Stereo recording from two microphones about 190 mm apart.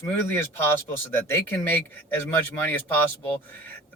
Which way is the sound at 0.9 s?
10° left (ahead or behind).